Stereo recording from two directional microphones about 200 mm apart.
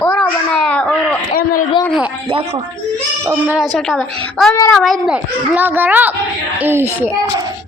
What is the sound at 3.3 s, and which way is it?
A woman's voice, 10° right (ahead or behind).